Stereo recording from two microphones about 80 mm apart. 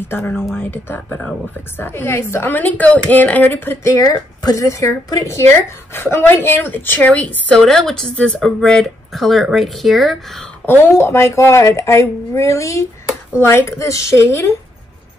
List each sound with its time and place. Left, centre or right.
0.6 s a woman's voice: left
3.8 s a woman's voice: left; by 7.6 s centre
7.6 s speech: centre
10.6 s speech: left